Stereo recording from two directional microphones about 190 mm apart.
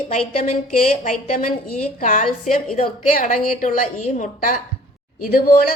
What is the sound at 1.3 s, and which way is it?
A woman's voice, 45° left (ahead or behind).